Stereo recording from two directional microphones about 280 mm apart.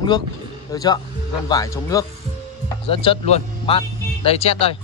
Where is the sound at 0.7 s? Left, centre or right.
Centre.